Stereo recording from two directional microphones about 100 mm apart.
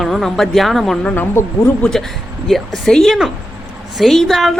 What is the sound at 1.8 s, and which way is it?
Speech, 5° left (ahead or behind).